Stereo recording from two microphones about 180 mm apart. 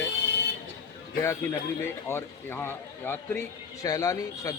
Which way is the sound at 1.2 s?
15° left (ahead or behind).